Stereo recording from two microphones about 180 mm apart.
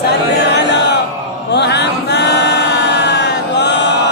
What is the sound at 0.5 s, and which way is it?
Chant, 70° left (ahead or behind).